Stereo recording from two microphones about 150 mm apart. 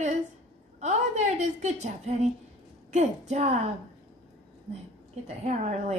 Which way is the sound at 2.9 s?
50° right (ahead or behind).